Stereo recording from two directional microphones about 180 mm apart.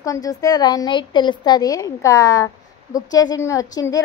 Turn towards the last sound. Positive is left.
turn(degrees=20)  # may be behind; listen again after turning